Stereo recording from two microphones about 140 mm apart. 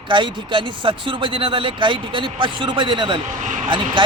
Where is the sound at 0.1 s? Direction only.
35° right (ahead or behind).